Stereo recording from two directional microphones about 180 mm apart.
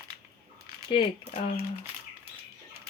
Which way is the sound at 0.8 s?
35° left (ahead or behind).